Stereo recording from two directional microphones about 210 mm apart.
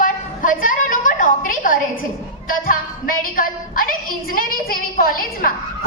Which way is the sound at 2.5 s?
40° left (ahead or behind).